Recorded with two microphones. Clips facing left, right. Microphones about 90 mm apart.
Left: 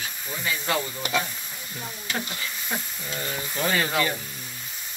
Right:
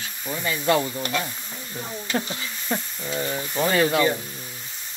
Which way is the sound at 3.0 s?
15° right (ahead or behind).